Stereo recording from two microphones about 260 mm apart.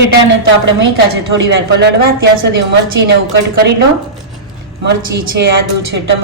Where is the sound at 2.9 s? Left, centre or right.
Right.